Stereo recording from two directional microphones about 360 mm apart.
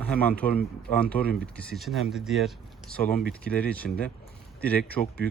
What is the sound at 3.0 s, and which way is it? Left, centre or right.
Speech, left.